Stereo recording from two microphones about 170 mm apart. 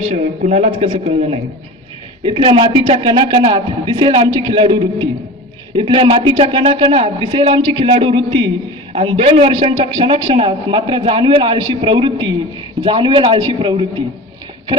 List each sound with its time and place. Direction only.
0.0 s a man's voice: 40° right (ahead or behind)